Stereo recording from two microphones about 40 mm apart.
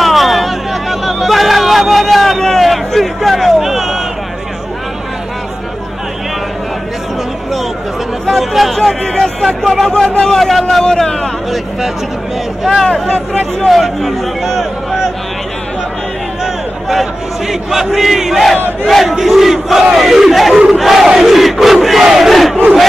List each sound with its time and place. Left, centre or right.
0.0 s a sound: centre
8.3 s speech: centre
9.0 s a man's voice: centre
10.0 s a man's voice: left
10.3 s a man's voice: centre
12.8 s a man's voice: centre
13.7 s battle cry: centre
16.9 s battle cry: centre
19.0 s crowd: centre
20.0 s battle cry: centre
22.0 s crowd: centre